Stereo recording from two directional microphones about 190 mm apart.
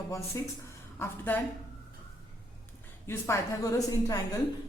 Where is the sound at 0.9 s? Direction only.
10° left (ahead or behind).